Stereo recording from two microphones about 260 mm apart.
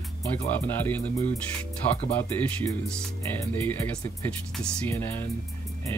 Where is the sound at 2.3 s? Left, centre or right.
Centre.